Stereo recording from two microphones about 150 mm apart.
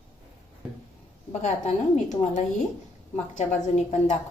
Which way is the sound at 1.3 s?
50° left (ahead or behind).